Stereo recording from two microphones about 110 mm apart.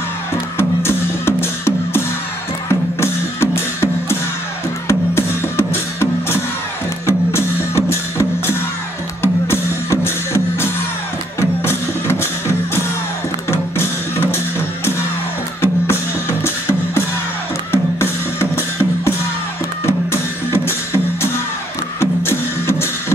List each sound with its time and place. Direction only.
0.6 s music: 20° left (ahead or behind)
15.6 s music: 20° left (ahead or behind)
19.9 s music: 20° left (ahead or behind)